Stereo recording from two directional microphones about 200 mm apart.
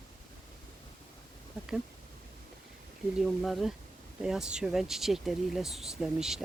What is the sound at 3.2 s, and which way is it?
Speech, centre (ahead or behind).